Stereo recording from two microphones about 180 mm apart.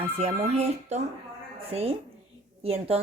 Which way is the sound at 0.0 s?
35° right (ahead or behind).